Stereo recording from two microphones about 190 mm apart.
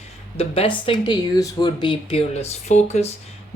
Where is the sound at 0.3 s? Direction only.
30° left (ahead or behind).